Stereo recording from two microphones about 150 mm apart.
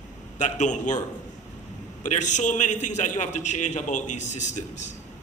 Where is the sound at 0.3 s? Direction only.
55° left (ahead or behind).